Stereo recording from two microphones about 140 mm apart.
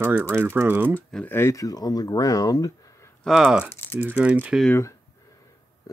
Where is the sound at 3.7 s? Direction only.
15° left (ahead or behind).